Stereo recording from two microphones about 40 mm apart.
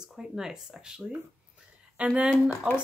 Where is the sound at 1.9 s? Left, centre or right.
Right.